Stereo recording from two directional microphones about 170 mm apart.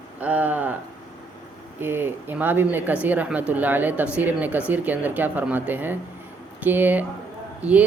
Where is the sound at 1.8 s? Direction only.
15° right (ahead or behind).